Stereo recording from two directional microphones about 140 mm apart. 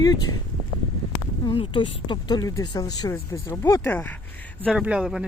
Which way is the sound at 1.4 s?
35° left (ahead or behind).